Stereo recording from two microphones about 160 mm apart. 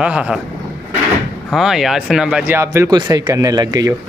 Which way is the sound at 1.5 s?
Centre (ahead or behind).